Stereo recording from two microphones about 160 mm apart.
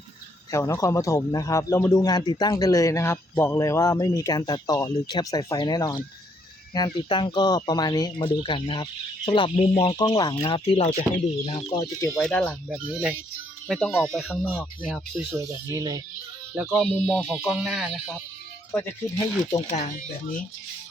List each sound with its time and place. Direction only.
0.5 s speech: 20° left (ahead or behind)
11.9 s speech: 15° left (ahead or behind)
12.2 s a sound: 5° left (ahead or behind)
12.6 s speech: 5° right (ahead or behind)
13.7 s a sound: 5° left (ahead or behind)
15.4 s speech: 20° right (ahead or behind)
16.6 s speech: 10° right (ahead or behind)
16.8 s a sound: 5° right (ahead or behind)
18.7 s speech: 15° left (ahead or behind)
19.7 s speech: 50° left (ahead or behind)